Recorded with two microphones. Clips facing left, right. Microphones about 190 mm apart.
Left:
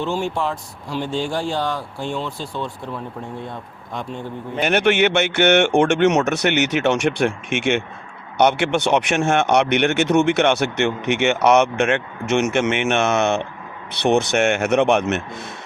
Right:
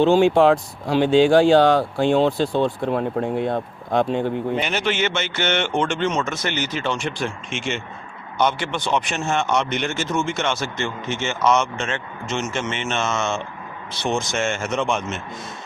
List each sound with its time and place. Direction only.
0.0 s speech: 90° right
2.6 s speech: 70° right (ahead or behind)
4.6 s speech: 60° left (ahead or behind)